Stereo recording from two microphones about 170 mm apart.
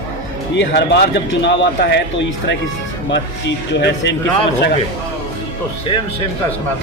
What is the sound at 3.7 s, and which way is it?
Speech, 90° left.